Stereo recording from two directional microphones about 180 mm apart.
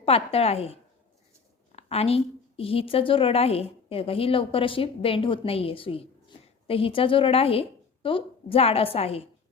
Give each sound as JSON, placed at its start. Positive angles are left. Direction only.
{"t": 0.0, "sound": "a woman's voice", "side_deg": 35}